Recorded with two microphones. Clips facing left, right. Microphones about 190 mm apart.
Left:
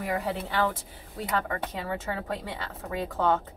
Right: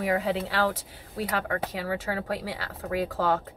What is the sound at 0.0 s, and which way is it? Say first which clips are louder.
A woman's voice: right 4 dB; 90° right.